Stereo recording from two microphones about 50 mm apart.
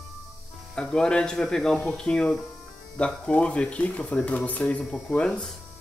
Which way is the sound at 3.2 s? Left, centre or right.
Left.